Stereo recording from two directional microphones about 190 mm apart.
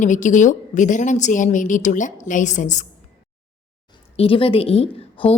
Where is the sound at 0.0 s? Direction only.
40° left (ahead or behind).